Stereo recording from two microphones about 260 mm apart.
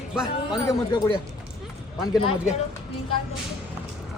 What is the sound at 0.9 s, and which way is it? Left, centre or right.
Speech, centre.